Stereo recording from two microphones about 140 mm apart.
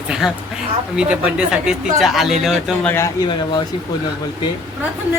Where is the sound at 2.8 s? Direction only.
20° left (ahead or behind).